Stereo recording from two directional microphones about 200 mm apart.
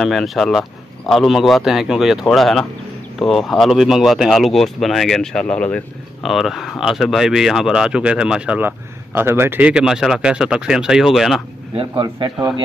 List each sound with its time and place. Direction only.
0.0 s speech: centre (ahead or behind)
11.7 s a man's voice: 25° right (ahead or behind)